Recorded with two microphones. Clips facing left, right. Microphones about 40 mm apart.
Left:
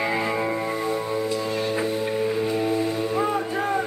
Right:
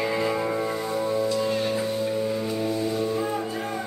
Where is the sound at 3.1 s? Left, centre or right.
Left.